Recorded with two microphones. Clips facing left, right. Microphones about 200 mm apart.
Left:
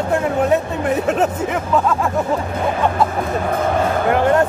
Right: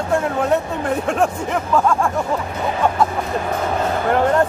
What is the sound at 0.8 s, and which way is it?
Speech, 5° left (ahead or behind).